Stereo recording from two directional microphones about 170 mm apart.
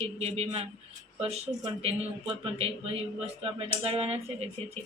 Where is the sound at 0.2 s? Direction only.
40° right (ahead or behind).